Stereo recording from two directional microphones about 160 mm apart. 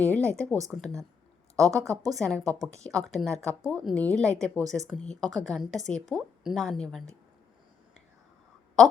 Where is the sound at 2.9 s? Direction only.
Centre (ahead or behind).